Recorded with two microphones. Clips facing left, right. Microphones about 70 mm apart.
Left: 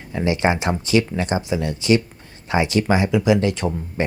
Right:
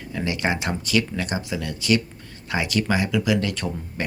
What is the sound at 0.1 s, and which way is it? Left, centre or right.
Speech, left.